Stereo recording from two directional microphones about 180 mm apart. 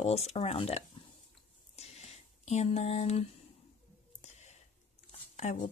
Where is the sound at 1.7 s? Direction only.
35° left (ahead or behind).